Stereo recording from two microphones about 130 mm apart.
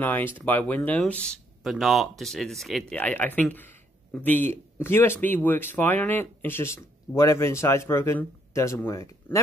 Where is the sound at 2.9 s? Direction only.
10° left (ahead or behind).